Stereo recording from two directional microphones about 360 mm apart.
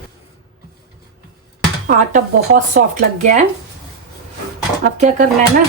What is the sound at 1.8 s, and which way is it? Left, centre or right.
A woman's voice, right.